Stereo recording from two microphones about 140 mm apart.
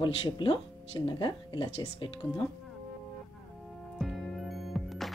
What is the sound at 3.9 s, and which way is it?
Music, centre (ahead or behind).